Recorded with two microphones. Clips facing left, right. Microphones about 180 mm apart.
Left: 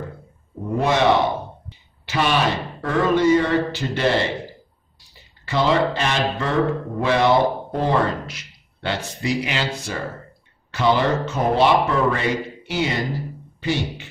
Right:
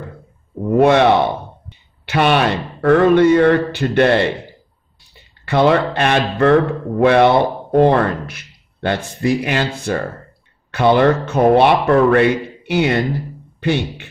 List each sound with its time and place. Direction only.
0.7 s speech: 60° right (ahead or behind)
2.0 s speech: 60° right (ahead or behind)
5.4 s speech: 60° right (ahead or behind)